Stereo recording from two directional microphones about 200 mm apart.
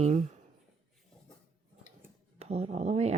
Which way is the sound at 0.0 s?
35° right (ahead or behind).